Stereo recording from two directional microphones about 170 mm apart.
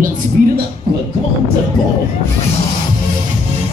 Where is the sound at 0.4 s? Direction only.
55° right (ahead or behind).